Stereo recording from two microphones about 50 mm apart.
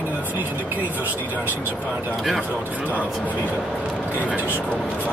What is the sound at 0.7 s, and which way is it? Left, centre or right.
Speech, left.